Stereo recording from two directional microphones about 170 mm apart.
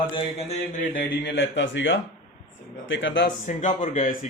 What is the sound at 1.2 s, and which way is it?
Speech, 90° left.